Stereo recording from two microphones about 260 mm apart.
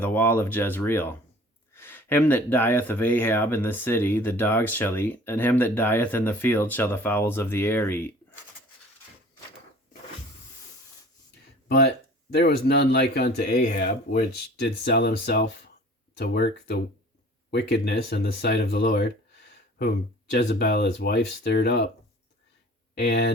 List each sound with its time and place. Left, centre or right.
0.0 s speech: centre
12.3 s speech: left
20.5 s speech: left
23.0 s speech: left